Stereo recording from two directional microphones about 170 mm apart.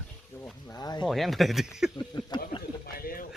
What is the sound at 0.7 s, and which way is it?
Speech, 25° left (ahead or behind).